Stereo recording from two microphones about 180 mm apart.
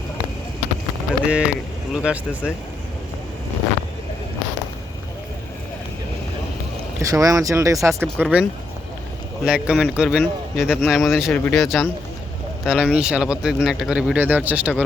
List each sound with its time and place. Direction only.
1.2 s speech: 5° right (ahead or behind)
7.0 s speech: 20° right (ahead or behind)